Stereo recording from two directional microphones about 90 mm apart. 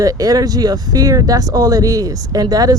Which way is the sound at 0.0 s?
40° right (ahead or behind).